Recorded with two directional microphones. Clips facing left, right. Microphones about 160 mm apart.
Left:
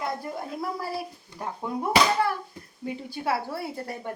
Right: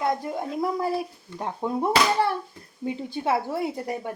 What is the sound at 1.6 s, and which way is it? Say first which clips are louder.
A woman's voice: right 1 dB; 25° right (ahead or behind).